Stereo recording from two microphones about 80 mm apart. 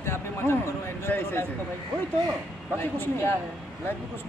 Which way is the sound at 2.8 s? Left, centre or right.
Left.